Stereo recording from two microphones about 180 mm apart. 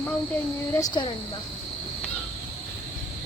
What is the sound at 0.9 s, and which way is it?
Speech, 25° left (ahead or behind).